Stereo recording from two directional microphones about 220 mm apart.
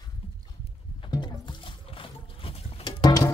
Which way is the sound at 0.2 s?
25° left (ahead or behind).